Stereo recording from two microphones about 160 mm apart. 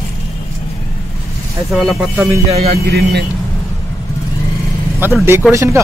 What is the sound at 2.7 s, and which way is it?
Speech, 85° right.